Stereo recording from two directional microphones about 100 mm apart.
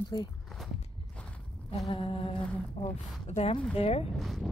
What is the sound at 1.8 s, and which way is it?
Humming, 70° left (ahead or behind).